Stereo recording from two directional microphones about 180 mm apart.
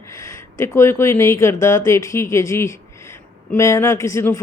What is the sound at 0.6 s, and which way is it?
Speech, 15° left (ahead or behind).